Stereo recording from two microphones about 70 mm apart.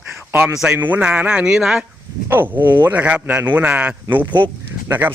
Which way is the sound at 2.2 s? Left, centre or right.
Right.